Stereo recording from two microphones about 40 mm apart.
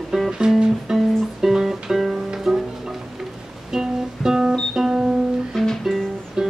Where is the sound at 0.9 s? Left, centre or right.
Centre.